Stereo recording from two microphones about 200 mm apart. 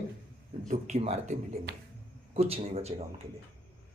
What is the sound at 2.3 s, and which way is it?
Speech, 30° right (ahead or behind).